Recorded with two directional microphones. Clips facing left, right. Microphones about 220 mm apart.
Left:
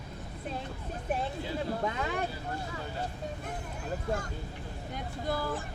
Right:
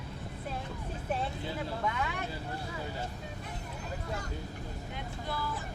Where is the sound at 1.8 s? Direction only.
35° left (ahead or behind).